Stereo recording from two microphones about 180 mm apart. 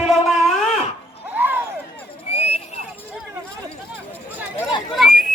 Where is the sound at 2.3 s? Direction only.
35° left (ahead or behind).